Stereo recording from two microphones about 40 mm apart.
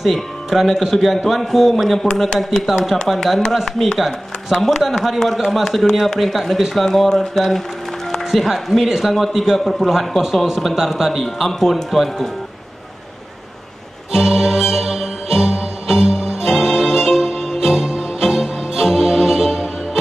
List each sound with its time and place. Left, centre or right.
0.0 s speech: centre
2.2 s a man's voice: centre
2.6 s speech: centre
8.8 s a man's voice: centre
14.1 s music: centre